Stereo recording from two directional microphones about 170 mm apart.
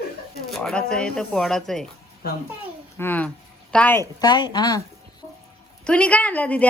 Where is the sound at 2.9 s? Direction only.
10° left (ahead or behind).